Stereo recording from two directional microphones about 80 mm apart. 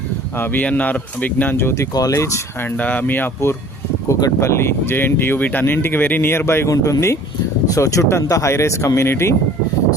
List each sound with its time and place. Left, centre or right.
0.3 s speech: left
1.5 s speech: left
1.9 s speech: left
2.1 s speech: left
2.7 s speech: left
4.1 s speech: left
6.7 s speech: left